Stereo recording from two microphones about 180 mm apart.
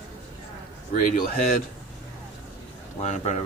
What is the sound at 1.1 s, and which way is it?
Speech, 50° left (ahead or behind).